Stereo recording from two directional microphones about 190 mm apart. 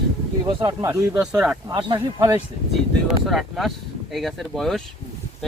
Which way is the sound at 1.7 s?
25° right (ahead or behind).